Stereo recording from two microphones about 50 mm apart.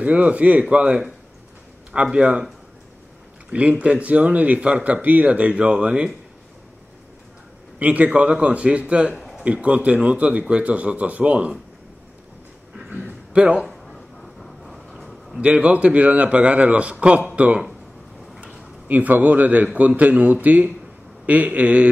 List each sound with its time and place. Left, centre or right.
0.0 s speech: right
2.1 s speech: centre
3.4 s speech: right
7.8 s speech: right
13.3 s speech: right
13.7 s a sound: centre
15.4 s speech: right
18.4 s a sound: right
18.9 s a man's voice: right